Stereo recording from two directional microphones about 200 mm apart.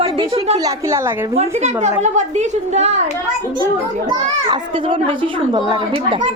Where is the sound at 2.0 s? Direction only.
35° right (ahead or behind).